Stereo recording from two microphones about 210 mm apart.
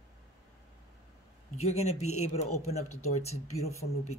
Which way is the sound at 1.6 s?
30° left (ahead or behind).